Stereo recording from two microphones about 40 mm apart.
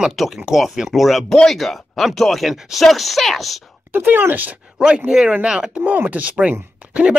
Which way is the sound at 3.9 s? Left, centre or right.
Right.